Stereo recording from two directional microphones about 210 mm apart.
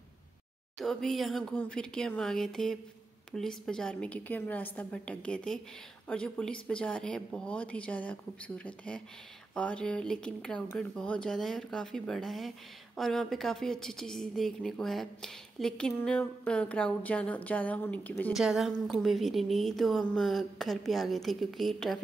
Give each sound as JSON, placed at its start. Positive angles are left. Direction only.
{"t": 0.7, "sound": "speech", "side_deg": 0}